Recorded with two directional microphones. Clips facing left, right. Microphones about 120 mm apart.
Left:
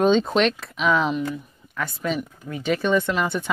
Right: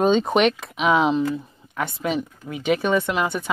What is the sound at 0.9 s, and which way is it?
Speech, 25° right (ahead or behind).